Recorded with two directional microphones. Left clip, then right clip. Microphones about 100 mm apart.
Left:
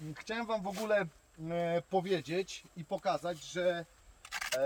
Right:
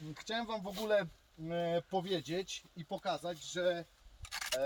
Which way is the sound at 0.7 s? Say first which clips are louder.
Right 1 dB; 30° right (ahead or behind).